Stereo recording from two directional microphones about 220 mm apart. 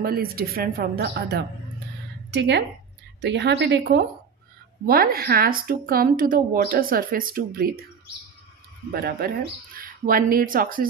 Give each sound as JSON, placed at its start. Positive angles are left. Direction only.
{"t": 0.0, "sound": "a woman's voice", "side_deg": -45}
{"t": 8.9, "sound": "a woman's voice", "side_deg": -45}